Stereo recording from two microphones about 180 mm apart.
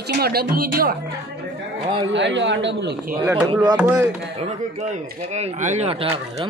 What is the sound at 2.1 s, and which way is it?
Speech, 80° right.